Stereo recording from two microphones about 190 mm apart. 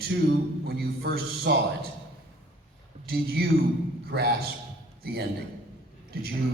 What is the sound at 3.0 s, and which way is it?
A man's voice, 55° right (ahead or behind).